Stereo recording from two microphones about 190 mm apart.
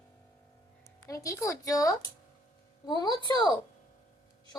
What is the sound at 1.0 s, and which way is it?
A woman's voice, 15° left (ahead or behind).